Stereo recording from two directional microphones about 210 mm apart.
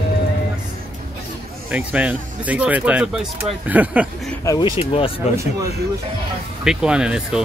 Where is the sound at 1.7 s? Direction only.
5° right (ahead or behind).